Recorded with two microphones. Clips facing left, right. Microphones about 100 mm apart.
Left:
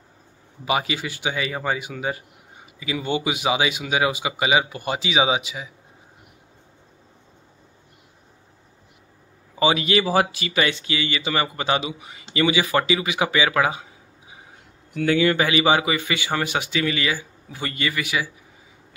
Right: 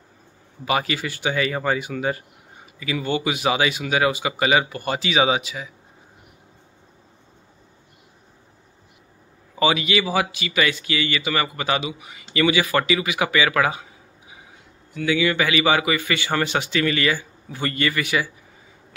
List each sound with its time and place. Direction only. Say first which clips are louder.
0.7 s a man's voice: right 1 dB; 15° left (ahead or behind)
9.8 s speech: left 2 dB; 35° left (ahead or behind); by 13.8 s 20° left (ahead or behind)
15.0 s a man's voice: left 2 dB; 45° left (ahead or behind); by 18.3 s 10° left (ahead or behind)